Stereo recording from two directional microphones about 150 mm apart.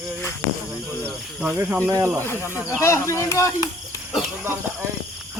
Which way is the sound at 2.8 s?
20° left (ahead or behind).